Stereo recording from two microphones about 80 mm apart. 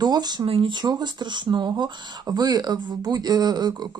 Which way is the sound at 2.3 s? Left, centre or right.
Right.